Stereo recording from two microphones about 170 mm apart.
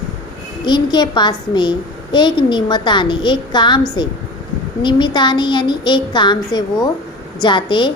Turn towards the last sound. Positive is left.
turn(degrees=30)  # may be behind; listen again after turning